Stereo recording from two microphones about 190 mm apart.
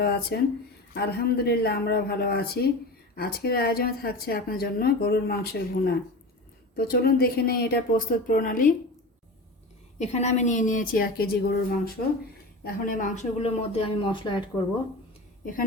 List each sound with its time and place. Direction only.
0.0 s speech: 55° left (ahead or behind)
10.0 s a woman's voice: 35° left (ahead or behind)